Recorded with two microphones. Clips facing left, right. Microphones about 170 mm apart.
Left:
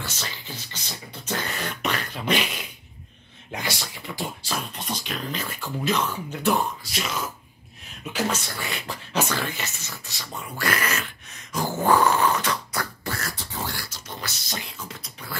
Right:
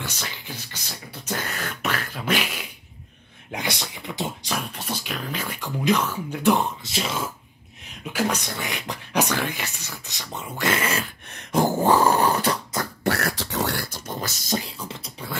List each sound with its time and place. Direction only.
0.0 s beatboxing: 15° right (ahead or behind)
3.5 s a sound: 20° right (ahead or behind)
4.7 s speech: 5° right (ahead or behind); by 7.2 s 30° right (ahead or behind)
8.0 s speech: 10° right (ahead or behind); by 11.1 s 30° right (ahead or behind)
11.6 s dog: 30° right (ahead or behind)
13.0 s beatboxing: 65° right (ahead or behind)
13.9 s beatboxing: 50° right (ahead or behind); by 15.3 s 30° right (ahead or behind)